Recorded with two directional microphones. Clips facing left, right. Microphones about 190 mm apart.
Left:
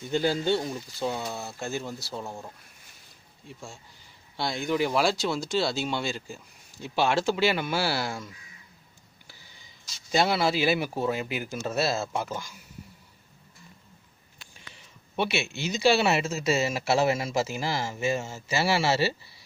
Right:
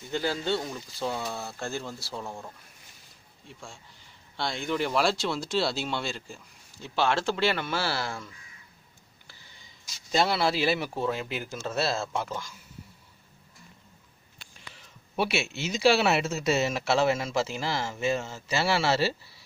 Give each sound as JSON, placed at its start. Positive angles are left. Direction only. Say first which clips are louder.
{"t": 0.1, "sound": "speech", "louder": "left 4 dB", "side_deg": 20}
{"t": 2.1, "sound": "speech", "louder": "right 1 dB", "side_deg": 5}
{"t": 4.4, "sound": "speech", "louder": "left 3 dB", "side_deg": 5}
{"t": 10.1, "sound": "speech", "louder": "left 1 dB", "side_deg": 5}
{"t": 15.1, "sound": "speech", "louder": "even", "side_deg": -5}